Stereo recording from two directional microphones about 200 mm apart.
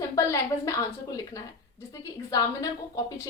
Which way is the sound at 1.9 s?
15° left (ahead or behind).